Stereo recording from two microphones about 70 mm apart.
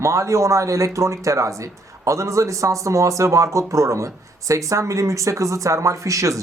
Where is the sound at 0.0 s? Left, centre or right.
Right.